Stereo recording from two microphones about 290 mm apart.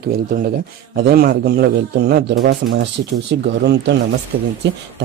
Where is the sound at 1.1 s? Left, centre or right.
Right.